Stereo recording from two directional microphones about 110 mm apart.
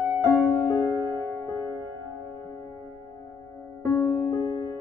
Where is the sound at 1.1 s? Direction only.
20° left (ahead or behind).